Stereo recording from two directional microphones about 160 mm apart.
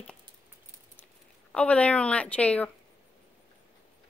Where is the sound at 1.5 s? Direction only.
10° left (ahead or behind).